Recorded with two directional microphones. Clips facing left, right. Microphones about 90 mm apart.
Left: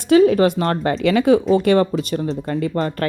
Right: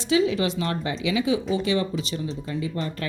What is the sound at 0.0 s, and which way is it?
Speech, 50° left (ahead or behind).